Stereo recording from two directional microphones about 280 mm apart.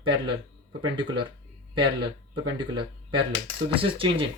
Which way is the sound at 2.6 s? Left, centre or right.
Centre.